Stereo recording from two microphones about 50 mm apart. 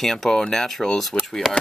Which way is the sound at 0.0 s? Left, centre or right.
Centre.